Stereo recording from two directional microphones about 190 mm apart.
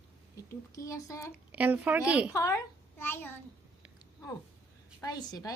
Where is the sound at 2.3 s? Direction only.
15° left (ahead or behind).